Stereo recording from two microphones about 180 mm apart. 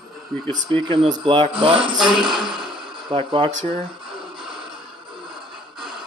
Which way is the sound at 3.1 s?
30° right (ahead or behind).